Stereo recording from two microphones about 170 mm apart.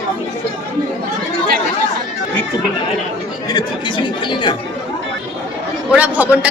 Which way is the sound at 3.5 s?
30° left (ahead or behind).